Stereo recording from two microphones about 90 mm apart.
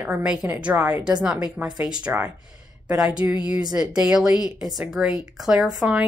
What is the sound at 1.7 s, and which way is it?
Speech, 45° right (ahead or behind).